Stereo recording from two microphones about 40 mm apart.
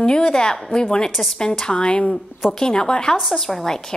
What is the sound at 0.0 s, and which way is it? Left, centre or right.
A woman's voice, left.